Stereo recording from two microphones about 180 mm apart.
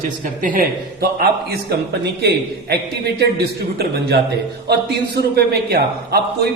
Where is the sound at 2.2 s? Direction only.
65° right (ahead or behind).